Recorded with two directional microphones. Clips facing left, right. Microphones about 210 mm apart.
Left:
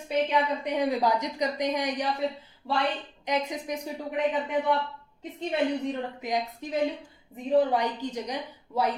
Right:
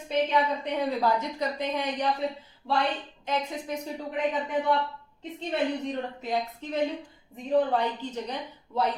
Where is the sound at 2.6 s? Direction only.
5° right (ahead or behind).